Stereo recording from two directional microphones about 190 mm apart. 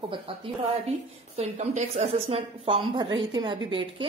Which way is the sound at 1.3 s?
35° right (ahead or behind).